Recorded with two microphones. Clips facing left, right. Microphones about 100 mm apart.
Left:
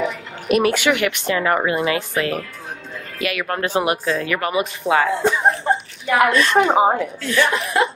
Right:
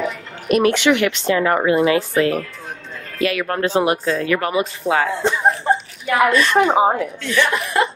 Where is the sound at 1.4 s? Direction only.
30° right (ahead or behind).